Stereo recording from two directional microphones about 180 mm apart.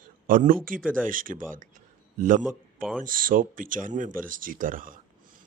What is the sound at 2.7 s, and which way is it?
Speech, 5° left (ahead or behind).